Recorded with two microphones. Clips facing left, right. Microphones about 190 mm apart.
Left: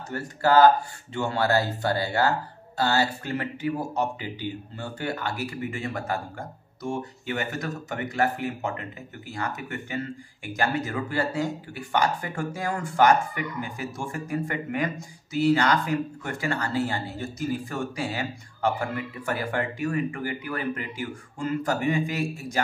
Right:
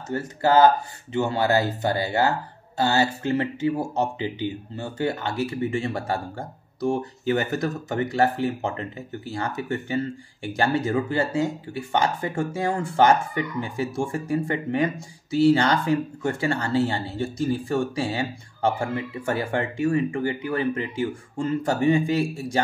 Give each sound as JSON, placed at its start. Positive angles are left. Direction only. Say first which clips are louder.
{"t": 0.1, "sound": "speech", "louder": "right 1 dB", "side_deg": -20}